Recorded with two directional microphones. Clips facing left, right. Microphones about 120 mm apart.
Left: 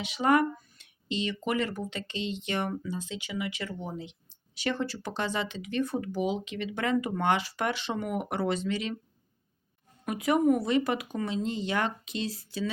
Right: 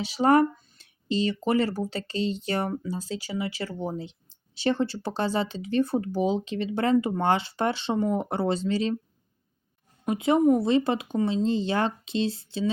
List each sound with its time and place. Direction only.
0.0 s speech: 35° right (ahead or behind)
10.1 s speech: 25° right (ahead or behind)